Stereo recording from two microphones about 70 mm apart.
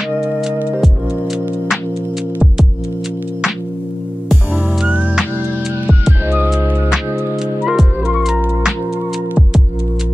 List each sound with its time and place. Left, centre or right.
4.8 s music: centre
6.2 s music: right
7.6 s music: centre